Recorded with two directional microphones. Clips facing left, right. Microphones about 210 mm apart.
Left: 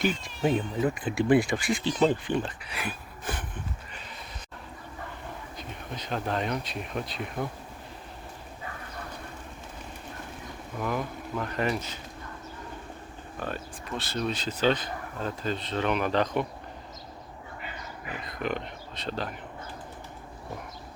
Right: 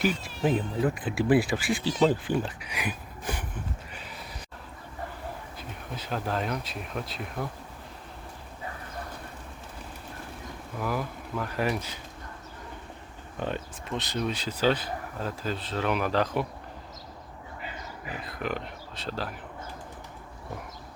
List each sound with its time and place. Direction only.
0.0 s speech: 5° right (ahead or behind)
2.2 s a sound: 10° right (ahead or behind)
5.5 s speech: 5° right (ahead or behind)
10.8 s speech: 5° right (ahead or behind)
13.4 s speech: 20° right (ahead or behind)
18.3 s speech: 5° right (ahead or behind)